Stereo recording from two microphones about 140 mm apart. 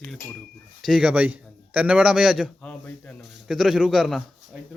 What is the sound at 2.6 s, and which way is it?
Speech, 10° left (ahead or behind).